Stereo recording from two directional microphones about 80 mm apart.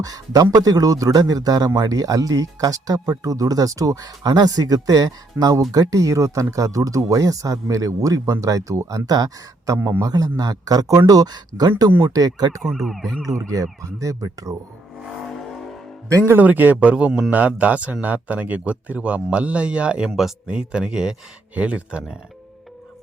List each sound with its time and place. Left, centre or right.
0.0 s speech: right
12.6 s speech: centre
13.4 s speech: right
16.1 s speech: right
16.4 s speech: right